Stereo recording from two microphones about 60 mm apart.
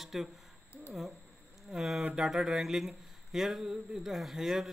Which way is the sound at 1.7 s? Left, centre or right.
Centre.